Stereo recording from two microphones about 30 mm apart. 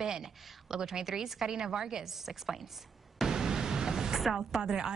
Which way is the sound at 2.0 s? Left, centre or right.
Centre.